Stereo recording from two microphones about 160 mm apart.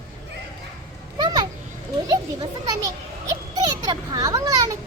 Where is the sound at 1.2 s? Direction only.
25° right (ahead or behind).